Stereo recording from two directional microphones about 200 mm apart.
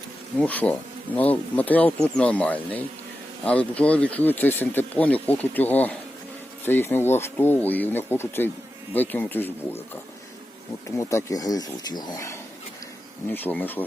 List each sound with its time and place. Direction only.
0.3 s speech: 5° left (ahead or behind)
10.8 s speech: 15° left (ahead or behind)